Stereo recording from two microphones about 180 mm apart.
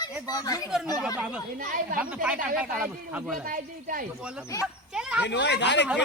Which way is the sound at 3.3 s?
50° right (ahead or behind).